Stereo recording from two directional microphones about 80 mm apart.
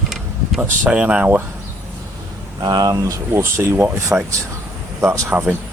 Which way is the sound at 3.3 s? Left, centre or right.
Right.